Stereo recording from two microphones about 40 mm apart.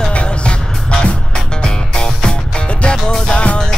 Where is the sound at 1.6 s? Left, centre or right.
Centre.